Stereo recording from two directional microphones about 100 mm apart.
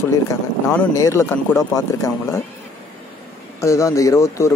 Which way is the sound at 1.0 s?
30° left (ahead or behind).